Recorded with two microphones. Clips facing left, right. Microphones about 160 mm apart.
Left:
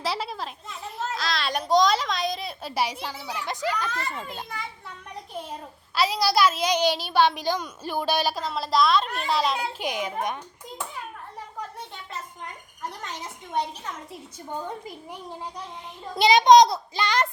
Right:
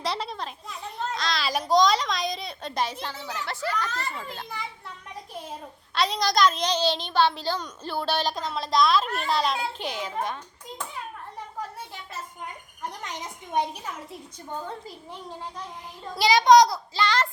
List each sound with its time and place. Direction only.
0.0 s a child's voice: 5° left (ahead or behind)
4.4 s a child's voice: centre (ahead or behind)
5.9 s a woman's voice: 5° left (ahead or behind)
9.8 s a woman's voice: 15° left (ahead or behind)
13.0 s a woman's voice: 15° right (ahead or behind)
14.5 s a woman's voice: 15° left (ahead or behind)